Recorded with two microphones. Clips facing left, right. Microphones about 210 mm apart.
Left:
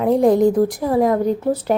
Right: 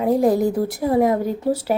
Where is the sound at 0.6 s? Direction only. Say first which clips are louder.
Left 6 dB; 50° left (ahead or behind).